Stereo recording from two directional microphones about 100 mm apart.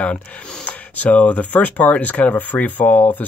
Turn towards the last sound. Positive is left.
turn(degrees=15)  # may be behind; listen again after turning